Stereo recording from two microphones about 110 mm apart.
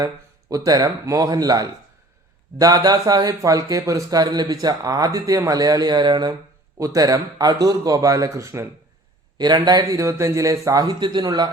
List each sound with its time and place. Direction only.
0.0 s speech: 30° right (ahead or behind)
6.7 s speech: 30° right (ahead or behind)
9.4 s speech: 40° right (ahead or behind)